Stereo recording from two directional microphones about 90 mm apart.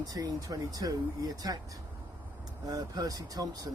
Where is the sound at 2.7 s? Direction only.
45° right (ahead or behind).